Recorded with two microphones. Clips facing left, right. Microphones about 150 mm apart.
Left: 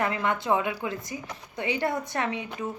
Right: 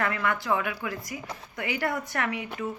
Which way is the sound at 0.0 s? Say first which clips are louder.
Left 1 dB; 20° left (ahead or behind).